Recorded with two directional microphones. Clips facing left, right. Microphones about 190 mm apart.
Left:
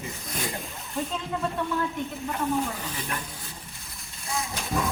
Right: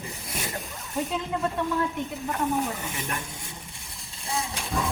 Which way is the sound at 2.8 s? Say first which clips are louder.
Right 1 dB; 25° right (ahead or behind).